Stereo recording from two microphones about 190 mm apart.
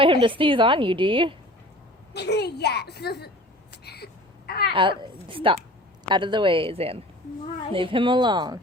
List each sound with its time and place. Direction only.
0.0 s a woman's voice: 25° right (ahead or behind)
2.1 s a woman's voice: 60° left (ahead or behind)
3.8 s a sound: 55° left (ahead or behind)
4.7 s a woman's voice: 25° right (ahead or behind)